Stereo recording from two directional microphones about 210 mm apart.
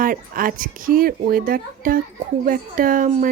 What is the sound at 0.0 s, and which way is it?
A woman's voice, 40° right (ahead or behind).